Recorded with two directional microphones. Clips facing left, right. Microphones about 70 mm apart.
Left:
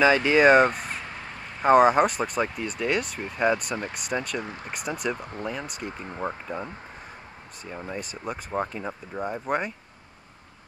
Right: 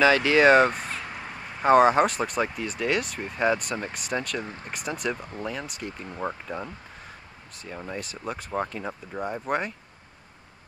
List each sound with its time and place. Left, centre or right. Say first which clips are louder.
0.0 s a sound: even; centre
1.7 s speech: even; centre
5.1 s speech: left 1 dB; left
5.4 s speech: left 1 dB; centre
7.7 s speech: left 1 dB; centre